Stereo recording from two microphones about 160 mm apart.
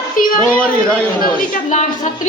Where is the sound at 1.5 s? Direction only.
50° left (ahead or behind).